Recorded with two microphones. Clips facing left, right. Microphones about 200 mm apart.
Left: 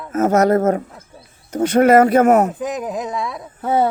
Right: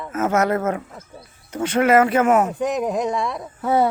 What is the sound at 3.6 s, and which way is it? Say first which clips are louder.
Speech: left 1 dB; 25° left (ahead or behind).